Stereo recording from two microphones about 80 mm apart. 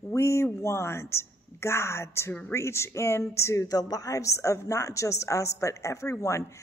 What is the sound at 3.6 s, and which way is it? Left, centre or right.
A woman's voice, left.